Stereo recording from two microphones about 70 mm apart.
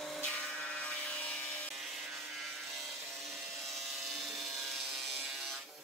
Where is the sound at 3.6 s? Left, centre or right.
Centre.